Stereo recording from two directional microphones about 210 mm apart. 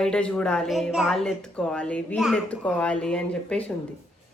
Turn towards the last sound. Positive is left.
turn(degrees=5)  # may be behind; listen again after turning